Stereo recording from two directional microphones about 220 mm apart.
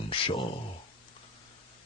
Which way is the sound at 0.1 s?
25° left (ahead or behind).